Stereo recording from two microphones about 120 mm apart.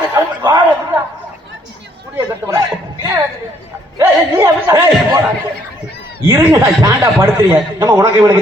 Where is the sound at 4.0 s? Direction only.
25° right (ahead or behind).